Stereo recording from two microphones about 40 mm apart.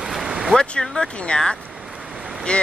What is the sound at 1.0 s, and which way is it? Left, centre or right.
Speech, left.